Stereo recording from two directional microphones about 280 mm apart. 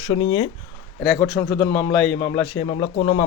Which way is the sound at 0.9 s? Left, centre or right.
Centre.